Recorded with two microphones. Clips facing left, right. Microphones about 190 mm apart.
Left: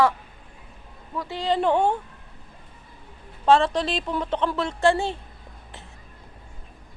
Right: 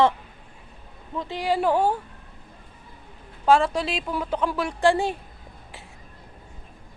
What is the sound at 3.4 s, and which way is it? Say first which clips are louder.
A woman's voice: left 1 dB; 10° right (ahead or behind).